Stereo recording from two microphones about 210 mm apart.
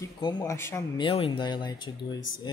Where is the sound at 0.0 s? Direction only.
20° left (ahead or behind).